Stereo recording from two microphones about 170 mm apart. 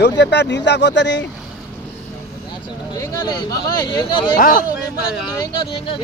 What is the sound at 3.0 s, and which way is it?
Speech, 25° left (ahead or behind).